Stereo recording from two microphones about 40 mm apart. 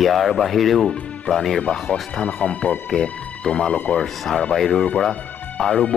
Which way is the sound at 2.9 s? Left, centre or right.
Centre.